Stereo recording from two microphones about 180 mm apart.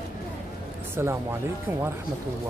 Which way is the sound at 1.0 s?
15° right (ahead or behind).